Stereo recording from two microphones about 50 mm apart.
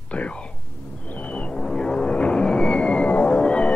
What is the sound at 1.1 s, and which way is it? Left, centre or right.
Music, left.